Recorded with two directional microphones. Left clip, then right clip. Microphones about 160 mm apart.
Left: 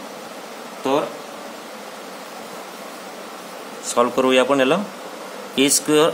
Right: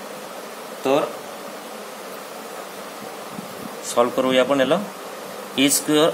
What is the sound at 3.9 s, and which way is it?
A man's voice, 15° left (ahead or behind).